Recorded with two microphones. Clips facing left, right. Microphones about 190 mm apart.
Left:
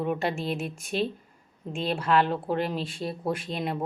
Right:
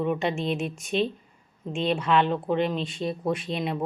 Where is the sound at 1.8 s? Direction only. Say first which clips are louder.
Right 1 dB; 5° left (ahead or behind).